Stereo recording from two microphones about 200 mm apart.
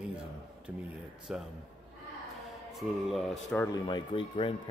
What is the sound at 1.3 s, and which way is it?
Speech, 5° right (ahead or behind).